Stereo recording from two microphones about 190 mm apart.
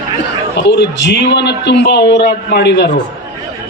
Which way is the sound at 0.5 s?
70° left (ahead or behind).